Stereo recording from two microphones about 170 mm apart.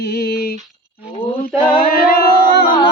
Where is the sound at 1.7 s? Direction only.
60° left (ahead or behind).